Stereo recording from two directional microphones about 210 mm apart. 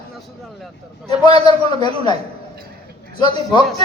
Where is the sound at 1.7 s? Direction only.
20° left (ahead or behind).